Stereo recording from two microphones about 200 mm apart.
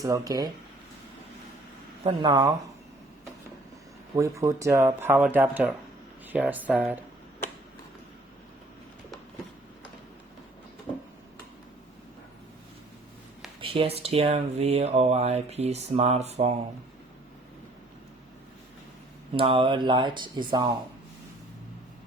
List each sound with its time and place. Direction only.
0.0 s speech: 15° right (ahead or behind)
2.0 s speech: 20° right (ahead or behind)
4.1 s speech: 15° right (ahead or behind)
10.9 s a sound: 20° left (ahead or behind)
13.6 s speech: 25° right (ahead or behind)
19.3 s speech: 25° right (ahead or behind)